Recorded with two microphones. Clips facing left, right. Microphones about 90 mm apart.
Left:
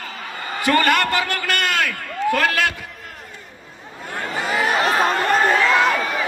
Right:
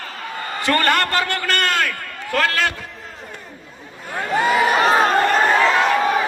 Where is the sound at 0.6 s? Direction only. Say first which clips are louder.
Left 1 dB; 15° left (ahead or behind).